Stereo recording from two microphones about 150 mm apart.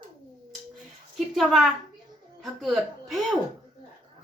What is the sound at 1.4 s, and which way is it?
Speech, centre (ahead or behind).